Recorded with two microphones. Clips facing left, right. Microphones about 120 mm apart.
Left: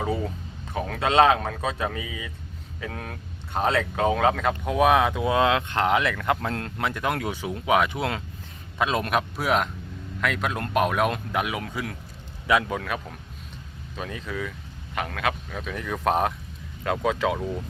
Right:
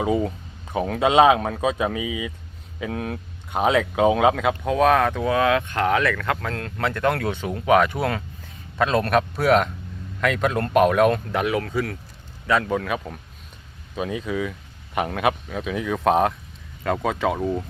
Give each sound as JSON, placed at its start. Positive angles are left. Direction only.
{"t": 0.7, "sound": "speech", "side_deg": -15}
{"t": 6.7, "sound": "speech", "side_deg": 10}
{"t": 8.8, "sound": "speech", "side_deg": 10}
{"t": 15.4, "sound": "speech", "side_deg": -5}